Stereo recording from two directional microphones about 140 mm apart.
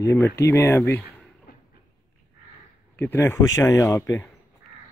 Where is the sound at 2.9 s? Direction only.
15° left (ahead or behind).